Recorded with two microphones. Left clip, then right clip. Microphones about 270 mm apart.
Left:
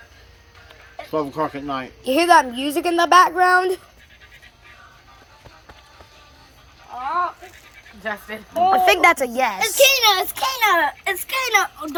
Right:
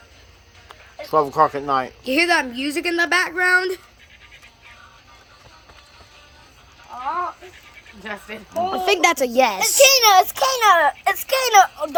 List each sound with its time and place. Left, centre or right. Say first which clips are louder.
1.1 s speech: right 7 dB; centre
2.0 s speech: left 5 dB; centre
8.0 s a woman's voice: left 4 dB; centre